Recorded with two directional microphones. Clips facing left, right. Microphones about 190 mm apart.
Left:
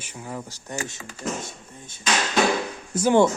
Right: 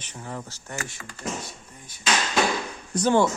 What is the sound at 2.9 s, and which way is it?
Speech, 5° left (ahead or behind).